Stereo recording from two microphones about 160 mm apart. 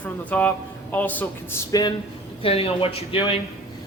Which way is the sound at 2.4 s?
35° left (ahead or behind).